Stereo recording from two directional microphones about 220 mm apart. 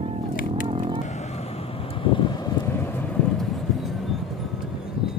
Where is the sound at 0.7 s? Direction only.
25° right (ahead or behind).